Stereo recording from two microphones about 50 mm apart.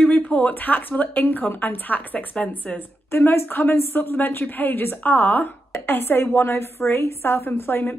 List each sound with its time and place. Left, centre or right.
0.0 s speech: left
2.3 s speech: left
3.1 s a woman's voice: left
3.4 s a woman's voice: left